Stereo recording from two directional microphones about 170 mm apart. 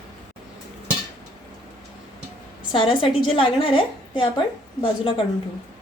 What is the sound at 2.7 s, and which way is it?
A woman's voice, 30° left (ahead or behind).